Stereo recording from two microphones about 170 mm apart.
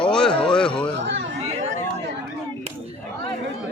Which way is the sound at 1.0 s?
90° right.